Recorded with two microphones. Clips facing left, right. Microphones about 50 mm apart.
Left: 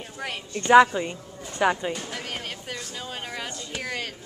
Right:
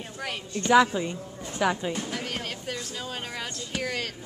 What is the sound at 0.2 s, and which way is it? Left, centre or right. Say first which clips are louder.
A woman's voice: even; centre.